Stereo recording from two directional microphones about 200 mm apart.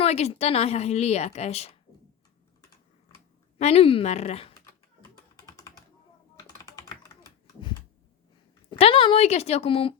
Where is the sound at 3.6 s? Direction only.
30° left (ahead or behind).